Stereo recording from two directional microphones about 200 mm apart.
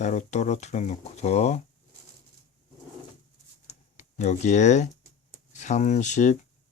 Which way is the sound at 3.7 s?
35° left (ahead or behind).